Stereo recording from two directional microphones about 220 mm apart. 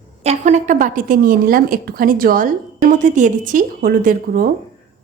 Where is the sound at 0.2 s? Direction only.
30° right (ahead or behind).